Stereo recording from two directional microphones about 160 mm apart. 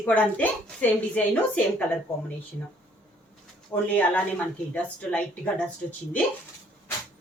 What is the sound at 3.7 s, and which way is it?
A woman's voice, 20° left (ahead or behind).